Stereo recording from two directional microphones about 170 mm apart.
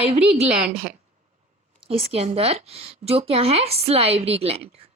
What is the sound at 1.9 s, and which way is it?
A woman's voice, 35° right (ahead or behind).